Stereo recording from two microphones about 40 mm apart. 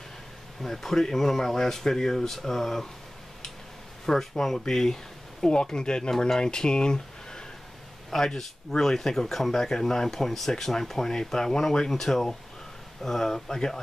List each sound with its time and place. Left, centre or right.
0.6 s speech: centre
4.0 s speech: centre